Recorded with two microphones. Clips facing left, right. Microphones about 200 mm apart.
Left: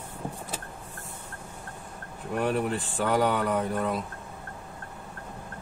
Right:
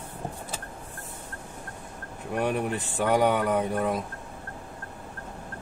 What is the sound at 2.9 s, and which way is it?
Speech, 15° right (ahead or behind).